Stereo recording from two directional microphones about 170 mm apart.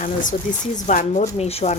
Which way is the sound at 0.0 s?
50° left (ahead or behind).